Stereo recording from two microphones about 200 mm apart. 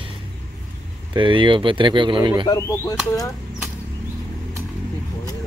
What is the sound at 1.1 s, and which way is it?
Speech, 25° right (ahead or behind).